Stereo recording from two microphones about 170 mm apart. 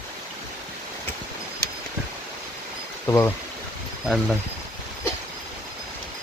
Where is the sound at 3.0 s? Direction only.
15° left (ahead or behind).